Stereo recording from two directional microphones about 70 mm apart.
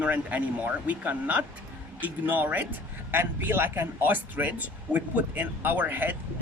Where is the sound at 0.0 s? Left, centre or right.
Right.